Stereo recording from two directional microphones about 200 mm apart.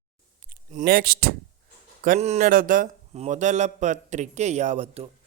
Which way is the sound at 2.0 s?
35° right (ahead or behind).